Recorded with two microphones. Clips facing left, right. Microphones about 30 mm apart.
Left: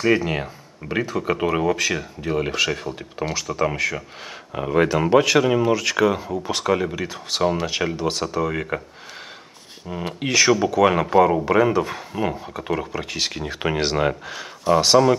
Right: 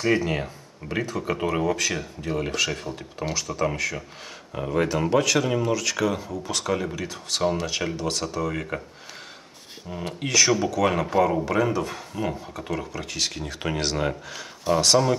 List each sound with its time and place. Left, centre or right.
0.0 s speech: centre
9.8 s speech: centre